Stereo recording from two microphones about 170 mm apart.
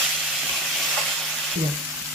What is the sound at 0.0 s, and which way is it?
Steam, centre (ahead or behind).